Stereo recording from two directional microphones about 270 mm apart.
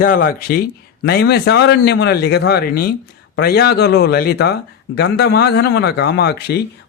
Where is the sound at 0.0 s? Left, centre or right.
Left.